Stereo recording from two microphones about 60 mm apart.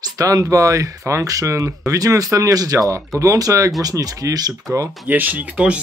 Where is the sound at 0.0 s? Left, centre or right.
Right.